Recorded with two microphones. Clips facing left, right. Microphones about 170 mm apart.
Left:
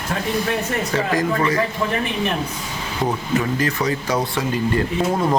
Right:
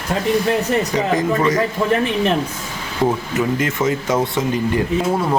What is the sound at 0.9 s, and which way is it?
Speech, 20° right (ahead or behind).